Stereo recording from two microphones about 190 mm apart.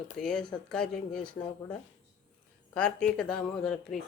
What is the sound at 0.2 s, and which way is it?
Speech, 5° left (ahead or behind).